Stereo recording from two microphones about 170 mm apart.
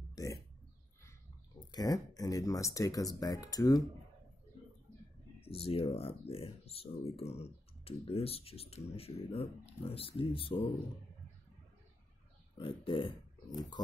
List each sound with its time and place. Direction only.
0.1 s pig: 20° left (ahead or behind)
1.7 s speech: 20° left (ahead or behind)
5.4 s speech: 35° left (ahead or behind)
12.5 s speech: 30° left (ahead or behind)